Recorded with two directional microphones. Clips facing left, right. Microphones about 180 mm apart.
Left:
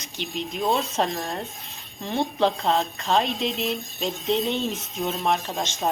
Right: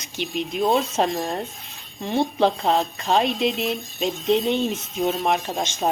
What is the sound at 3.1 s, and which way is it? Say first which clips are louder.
Speech: right 3 dB; centre (ahead or behind).